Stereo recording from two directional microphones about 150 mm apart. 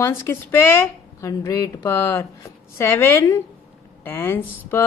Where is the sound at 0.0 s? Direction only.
15° left (ahead or behind).